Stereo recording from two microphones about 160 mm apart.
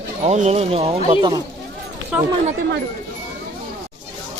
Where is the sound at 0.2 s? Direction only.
45° right (ahead or behind).